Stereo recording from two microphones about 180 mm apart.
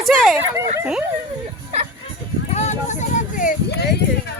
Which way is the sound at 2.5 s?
40° left (ahead or behind).